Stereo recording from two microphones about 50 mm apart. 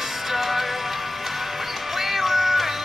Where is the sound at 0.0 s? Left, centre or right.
Centre.